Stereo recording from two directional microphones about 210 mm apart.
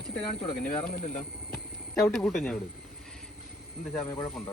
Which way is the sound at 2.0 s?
5° left (ahead or behind).